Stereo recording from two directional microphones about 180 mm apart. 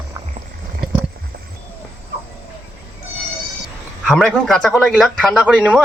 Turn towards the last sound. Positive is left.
turn(degrees=-5)  # may be behind; listen again after turning